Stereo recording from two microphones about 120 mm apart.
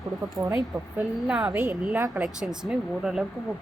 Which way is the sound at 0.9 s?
5° right (ahead or behind).